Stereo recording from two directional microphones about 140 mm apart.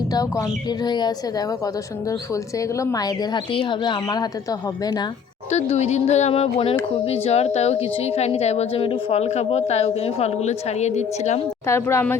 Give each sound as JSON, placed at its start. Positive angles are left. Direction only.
{"t": 0.1, "sound": "speech", "side_deg": 25}
{"t": 5.5, "sound": "a woman's voice", "side_deg": 50}
{"t": 11.6, "sound": "speech", "side_deg": 20}